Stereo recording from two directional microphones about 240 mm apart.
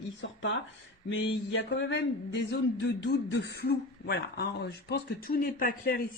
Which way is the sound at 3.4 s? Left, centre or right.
Left.